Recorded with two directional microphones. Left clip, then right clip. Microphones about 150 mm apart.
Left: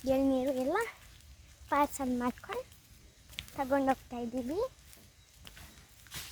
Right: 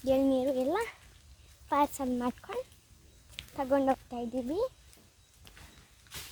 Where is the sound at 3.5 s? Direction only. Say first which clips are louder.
Right 2 dB; 35° right (ahead or behind).